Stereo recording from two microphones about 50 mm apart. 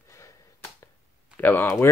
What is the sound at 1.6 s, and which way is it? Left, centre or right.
Speech, left.